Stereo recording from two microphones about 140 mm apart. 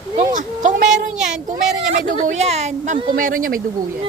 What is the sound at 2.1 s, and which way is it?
Speech, 70° right (ahead or behind).